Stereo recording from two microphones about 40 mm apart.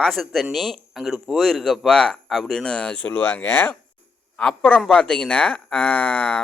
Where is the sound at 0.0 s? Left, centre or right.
Centre.